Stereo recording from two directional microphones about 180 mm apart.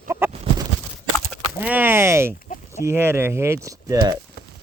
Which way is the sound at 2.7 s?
15° right (ahead or behind).